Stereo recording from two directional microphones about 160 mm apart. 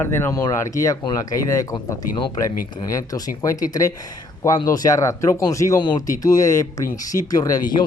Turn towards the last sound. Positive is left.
turn(degrees=20)  # may be behind; listen again after turning